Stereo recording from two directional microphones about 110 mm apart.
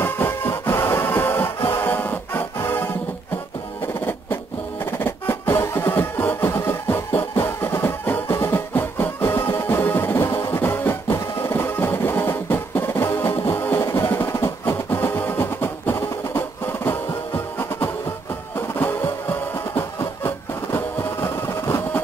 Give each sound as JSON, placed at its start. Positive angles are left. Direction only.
{"t": 0.0, "sound": "music", "side_deg": 20}
{"t": 4.9, "sound": "music", "side_deg": 20}
{"t": 18.8, "sound": "music", "side_deg": 20}